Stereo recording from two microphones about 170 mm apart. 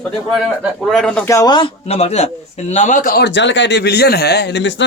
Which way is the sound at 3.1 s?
90° left.